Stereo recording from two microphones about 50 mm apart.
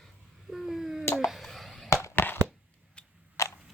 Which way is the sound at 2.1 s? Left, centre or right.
Left.